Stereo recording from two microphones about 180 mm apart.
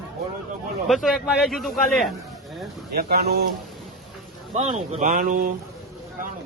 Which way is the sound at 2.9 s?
60° right (ahead or behind).